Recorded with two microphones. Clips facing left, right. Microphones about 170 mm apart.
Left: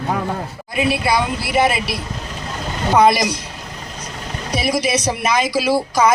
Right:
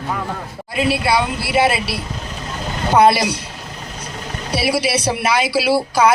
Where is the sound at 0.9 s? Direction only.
10° right (ahead or behind).